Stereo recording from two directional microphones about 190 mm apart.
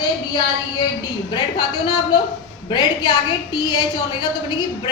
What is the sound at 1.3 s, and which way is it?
A woman's voice, 25° left (ahead or behind).